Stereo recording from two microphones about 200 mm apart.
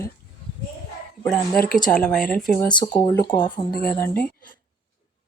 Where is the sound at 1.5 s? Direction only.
45° left (ahead or behind).